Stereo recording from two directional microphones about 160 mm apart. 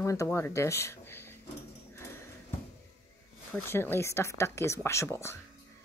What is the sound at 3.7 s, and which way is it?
A woman's voice, 15° left (ahead or behind).